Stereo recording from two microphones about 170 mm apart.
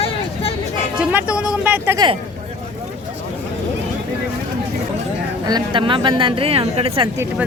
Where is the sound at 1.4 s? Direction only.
5° right (ahead or behind).